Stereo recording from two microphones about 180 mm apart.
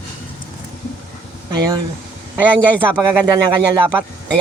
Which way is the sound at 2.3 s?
10° right (ahead or behind).